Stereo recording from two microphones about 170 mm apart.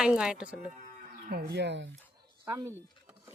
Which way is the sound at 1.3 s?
75° right (ahead or behind).